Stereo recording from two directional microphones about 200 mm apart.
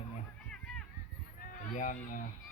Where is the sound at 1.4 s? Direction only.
45° left (ahead or behind).